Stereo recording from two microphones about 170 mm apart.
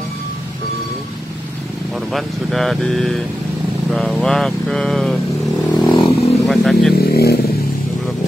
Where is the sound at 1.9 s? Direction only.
Centre (ahead or behind).